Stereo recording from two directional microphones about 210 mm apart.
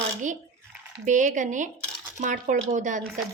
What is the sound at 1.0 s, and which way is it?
Speech, 35° right (ahead or behind).